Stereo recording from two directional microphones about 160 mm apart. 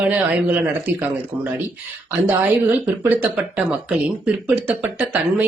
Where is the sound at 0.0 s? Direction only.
10° right (ahead or behind).